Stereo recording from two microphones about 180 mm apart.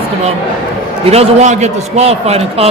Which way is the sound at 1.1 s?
35° right (ahead or behind).